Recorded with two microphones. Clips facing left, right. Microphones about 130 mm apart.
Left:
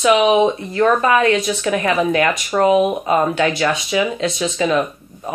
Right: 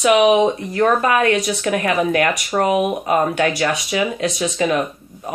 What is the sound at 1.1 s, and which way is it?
Speech, 45° right (ahead or behind).